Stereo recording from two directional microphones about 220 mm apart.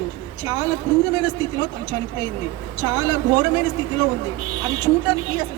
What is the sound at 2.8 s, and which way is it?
Speech, 15° right (ahead or behind).